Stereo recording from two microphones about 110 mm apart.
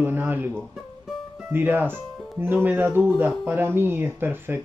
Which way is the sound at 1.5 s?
15° right (ahead or behind).